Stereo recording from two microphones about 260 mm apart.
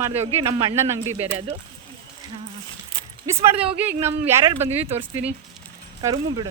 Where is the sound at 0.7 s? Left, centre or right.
Centre.